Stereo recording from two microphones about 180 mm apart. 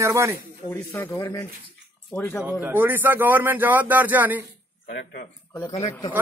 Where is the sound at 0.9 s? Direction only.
15° left (ahead or behind).